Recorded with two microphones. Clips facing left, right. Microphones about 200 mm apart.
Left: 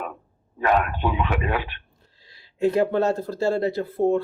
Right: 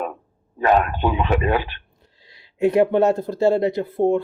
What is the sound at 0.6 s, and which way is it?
Speech, 30° right (ahead or behind).